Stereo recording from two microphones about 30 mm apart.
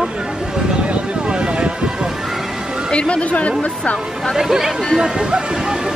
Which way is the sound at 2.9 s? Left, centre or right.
Left.